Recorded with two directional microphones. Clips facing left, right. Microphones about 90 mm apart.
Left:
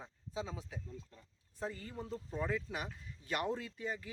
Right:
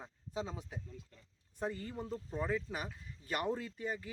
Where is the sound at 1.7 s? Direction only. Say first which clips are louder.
Right 4 dB; 35° right (ahead or behind).